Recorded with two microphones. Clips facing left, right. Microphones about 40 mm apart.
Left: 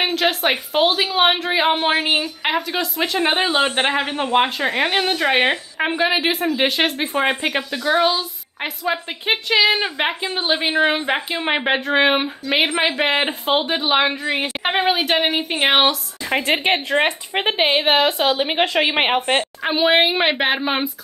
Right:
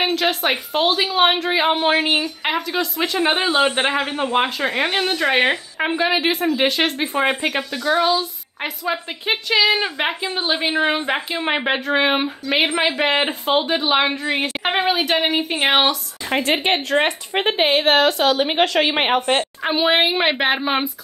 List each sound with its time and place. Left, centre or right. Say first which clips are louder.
0.0 s a woman's voice: even; centre
16.9 s a woman's voice: even; centre
17.5 s a woman's voice: even; left
19.6 s a woman's voice: left 2 dB; centre